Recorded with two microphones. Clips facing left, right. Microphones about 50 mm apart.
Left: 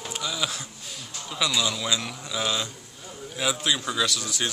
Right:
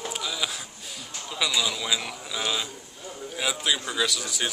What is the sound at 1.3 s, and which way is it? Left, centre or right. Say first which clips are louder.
Speech: left 1 dB; centre.